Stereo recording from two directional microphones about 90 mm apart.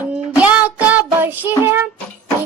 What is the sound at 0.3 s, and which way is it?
Music, 15° right (ahead or behind).